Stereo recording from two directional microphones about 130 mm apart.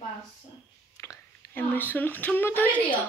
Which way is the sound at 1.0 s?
25° left (ahead or behind).